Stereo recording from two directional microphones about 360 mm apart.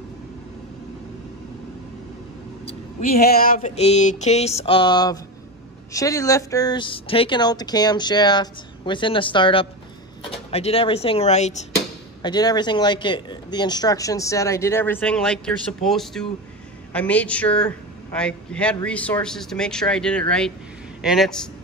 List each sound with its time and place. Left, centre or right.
2.6 s speech: left; by 21.4 s centre